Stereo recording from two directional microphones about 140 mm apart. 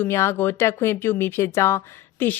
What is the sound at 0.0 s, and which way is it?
A woman's voice, 20° left (ahead or behind).